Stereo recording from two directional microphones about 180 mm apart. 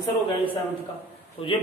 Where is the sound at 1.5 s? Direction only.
30° left (ahead or behind).